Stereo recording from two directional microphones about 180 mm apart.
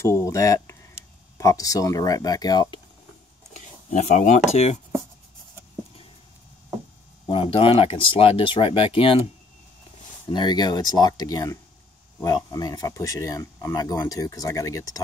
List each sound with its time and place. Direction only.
0.2 s speech: 15° left (ahead or behind)
3.5 s a sound: 40° left (ahead or behind)
7.2 s speech: 30° left (ahead or behind)
10.2 s speech: 25° left (ahead or behind)